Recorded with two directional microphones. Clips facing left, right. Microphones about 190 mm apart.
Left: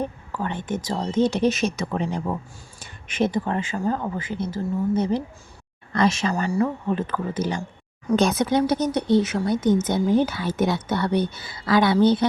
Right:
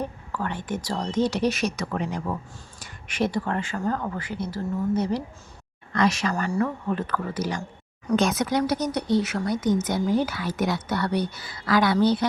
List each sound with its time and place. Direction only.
0.0 s speech: 20° left (ahead or behind)
6.3 s speech: 10° left (ahead or behind)
6.8 s speech: 20° left (ahead or behind)